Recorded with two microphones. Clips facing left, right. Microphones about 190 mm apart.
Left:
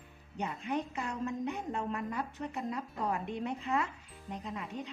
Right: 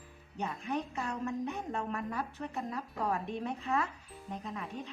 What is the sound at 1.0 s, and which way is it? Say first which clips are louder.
Speech: even; 20° left (ahead or behind).